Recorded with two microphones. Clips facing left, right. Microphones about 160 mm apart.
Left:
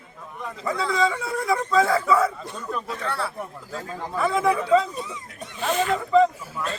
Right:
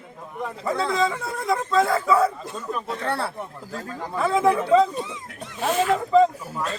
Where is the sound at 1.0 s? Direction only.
Centre (ahead or behind).